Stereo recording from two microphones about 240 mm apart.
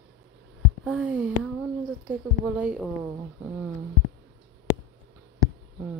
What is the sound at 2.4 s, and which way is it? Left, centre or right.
Speech, centre.